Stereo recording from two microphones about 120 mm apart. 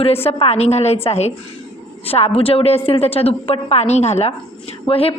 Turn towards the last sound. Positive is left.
turn(degrees=50)  # may be behind; listen again after turning